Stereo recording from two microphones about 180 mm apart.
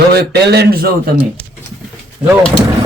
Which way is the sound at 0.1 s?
65° right (ahead or behind).